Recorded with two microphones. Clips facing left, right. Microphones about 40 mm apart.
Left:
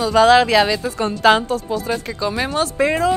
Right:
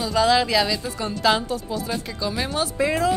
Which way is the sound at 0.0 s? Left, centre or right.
Left.